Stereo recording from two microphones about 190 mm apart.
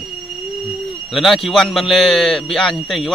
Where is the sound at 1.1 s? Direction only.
Centre (ahead or behind).